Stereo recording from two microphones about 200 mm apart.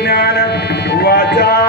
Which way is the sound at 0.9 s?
55° left (ahead or behind).